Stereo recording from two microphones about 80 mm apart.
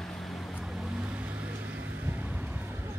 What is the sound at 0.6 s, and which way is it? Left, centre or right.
Vehicle, centre.